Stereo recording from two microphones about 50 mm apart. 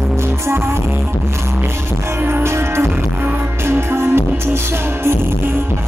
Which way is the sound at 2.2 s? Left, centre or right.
Right.